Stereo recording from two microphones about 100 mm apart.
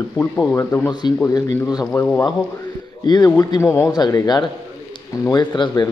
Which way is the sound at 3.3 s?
30° left (ahead or behind).